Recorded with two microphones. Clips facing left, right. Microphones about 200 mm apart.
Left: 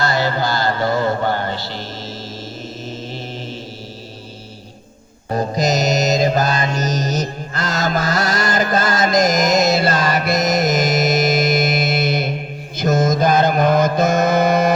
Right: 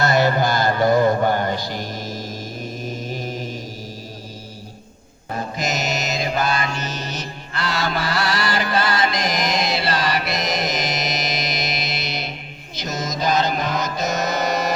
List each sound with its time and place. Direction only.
0.0 s music: 20° right (ahead or behind)
3.1 s mantra: 10° right (ahead or behind)
5.3 s mantra: 40° left (ahead or behind); by 14.7 s 55° left (ahead or behind)